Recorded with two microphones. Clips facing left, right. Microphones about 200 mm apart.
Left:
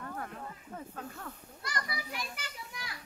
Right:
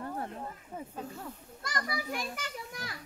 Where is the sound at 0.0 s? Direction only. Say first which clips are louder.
Right 4 dB; 25° right (ahead or behind).